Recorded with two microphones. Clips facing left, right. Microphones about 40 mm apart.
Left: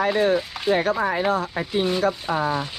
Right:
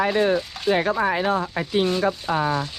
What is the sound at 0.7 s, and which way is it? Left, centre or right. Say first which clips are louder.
Speech: even; right.